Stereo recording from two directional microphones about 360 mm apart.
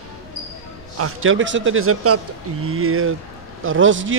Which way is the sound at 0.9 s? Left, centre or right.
Right.